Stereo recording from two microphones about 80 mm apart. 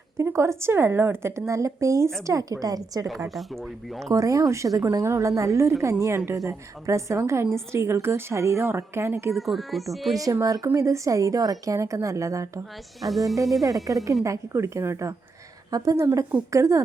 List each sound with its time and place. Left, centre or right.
0.2 s a woman's voice: right
3.2 s speech: centre
4.0 s a woman's voice: right
9.3 s speech: centre
10.4 s a woman's voice: right
13.0 s speech: centre
13.9 s a woman's voice: right
15.7 s a woman's voice: right